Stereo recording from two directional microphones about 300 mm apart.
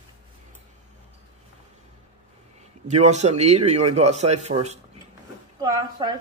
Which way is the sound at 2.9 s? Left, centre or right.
Right.